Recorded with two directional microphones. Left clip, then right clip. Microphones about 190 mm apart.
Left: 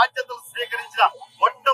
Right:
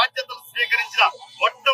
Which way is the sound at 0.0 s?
15° left (ahead or behind).